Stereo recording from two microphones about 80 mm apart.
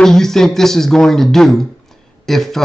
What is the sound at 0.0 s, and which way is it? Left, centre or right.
Speech, centre.